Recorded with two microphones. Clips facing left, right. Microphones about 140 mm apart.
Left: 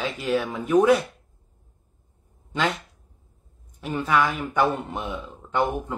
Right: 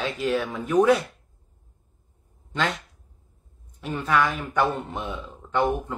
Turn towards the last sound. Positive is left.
turn(degrees=5)  # may be behind; listen again after turning